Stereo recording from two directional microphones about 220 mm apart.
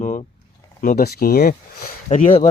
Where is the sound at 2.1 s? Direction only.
35° left (ahead or behind).